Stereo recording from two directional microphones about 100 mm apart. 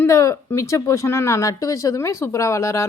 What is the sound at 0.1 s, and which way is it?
Speech, 30° left (ahead or behind).